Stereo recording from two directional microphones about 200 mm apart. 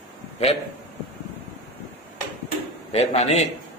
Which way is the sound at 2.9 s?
30° left (ahead or behind).